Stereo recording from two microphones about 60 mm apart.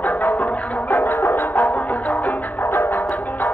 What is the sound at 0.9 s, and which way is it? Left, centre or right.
Music, left.